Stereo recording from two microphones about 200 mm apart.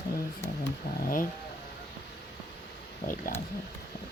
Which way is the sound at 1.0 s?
45° left (ahead or behind).